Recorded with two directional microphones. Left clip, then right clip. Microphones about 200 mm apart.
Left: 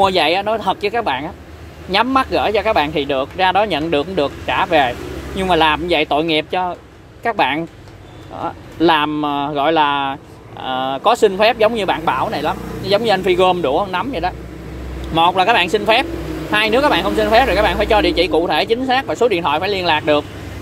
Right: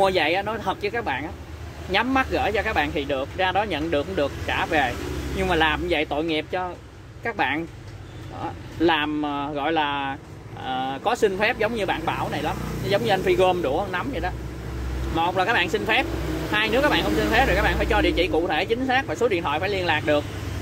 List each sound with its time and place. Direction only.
0.0 s speech: 30° left (ahead or behind)